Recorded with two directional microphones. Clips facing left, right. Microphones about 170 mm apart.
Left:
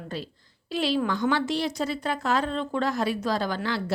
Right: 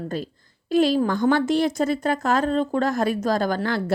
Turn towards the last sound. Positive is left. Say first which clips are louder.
# right 5 dB
turn(degrees=-50)  # may be behind; listen again after turning